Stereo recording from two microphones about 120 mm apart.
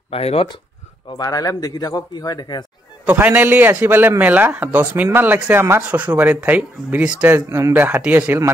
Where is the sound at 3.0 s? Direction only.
15° right (ahead or behind).